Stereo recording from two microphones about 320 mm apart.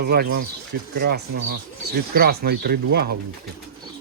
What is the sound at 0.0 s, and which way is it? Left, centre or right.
Speech, right.